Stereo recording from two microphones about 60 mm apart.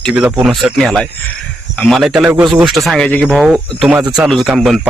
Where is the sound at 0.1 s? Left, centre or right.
Right.